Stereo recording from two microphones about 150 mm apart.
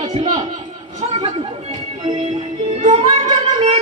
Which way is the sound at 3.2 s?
50° right (ahead or behind).